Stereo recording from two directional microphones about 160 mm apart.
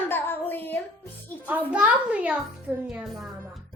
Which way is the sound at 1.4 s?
10° right (ahead or behind).